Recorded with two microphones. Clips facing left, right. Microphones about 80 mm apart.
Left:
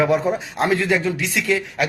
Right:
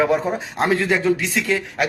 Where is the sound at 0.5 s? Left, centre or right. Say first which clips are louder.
Right 1 dB; right.